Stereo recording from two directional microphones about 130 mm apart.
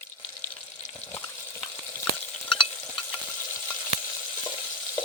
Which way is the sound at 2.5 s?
40° left (ahead or behind).